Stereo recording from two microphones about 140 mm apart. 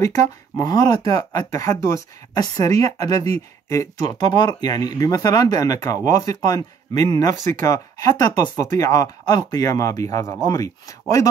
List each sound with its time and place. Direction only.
0.0 s speech: 20° left (ahead or behind)